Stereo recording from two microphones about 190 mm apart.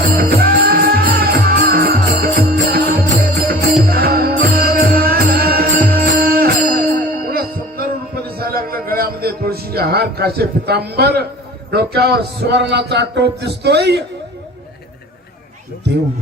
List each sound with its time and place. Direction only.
0.1 s music: 55° right (ahead or behind)
11.7 s a man's voice: 55° right (ahead or behind)